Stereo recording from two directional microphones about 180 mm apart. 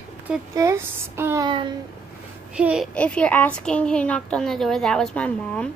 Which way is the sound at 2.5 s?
5° right (ahead or behind).